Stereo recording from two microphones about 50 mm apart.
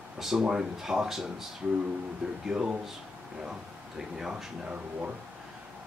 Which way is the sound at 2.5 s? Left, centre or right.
Centre.